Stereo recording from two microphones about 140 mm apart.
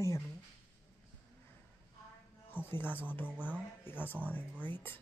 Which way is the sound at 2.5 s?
15° left (ahead or behind).